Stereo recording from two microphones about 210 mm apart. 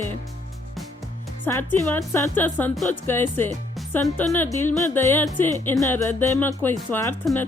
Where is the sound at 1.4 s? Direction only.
10° left (ahead or behind).